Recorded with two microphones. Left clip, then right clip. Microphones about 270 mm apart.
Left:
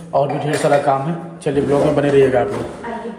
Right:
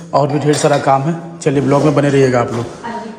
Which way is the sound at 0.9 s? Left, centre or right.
Centre.